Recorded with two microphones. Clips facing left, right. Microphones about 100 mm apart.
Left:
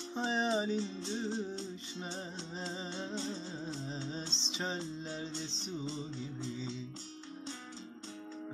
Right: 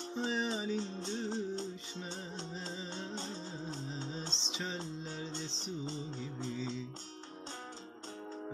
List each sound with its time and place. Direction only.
0.2 s music: 30° left (ahead or behind)
0.7 s music: 45° right (ahead or behind)